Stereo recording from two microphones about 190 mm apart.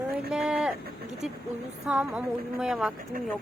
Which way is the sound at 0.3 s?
5° right (ahead or behind).